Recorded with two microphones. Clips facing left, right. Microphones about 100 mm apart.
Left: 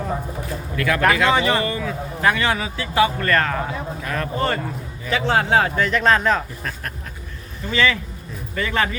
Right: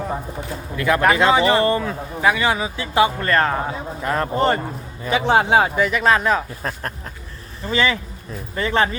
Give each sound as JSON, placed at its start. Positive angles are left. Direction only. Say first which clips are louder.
{"t": 0.8, "sound": "a man's voice", "louder": "right 2 dB", "side_deg": -20}
{"t": 2.2, "sound": "a man's voice", "louder": "right 1 dB", "side_deg": -15}
{"t": 6.6, "sound": "a man's voice", "louder": "right 3 dB", "side_deg": -35}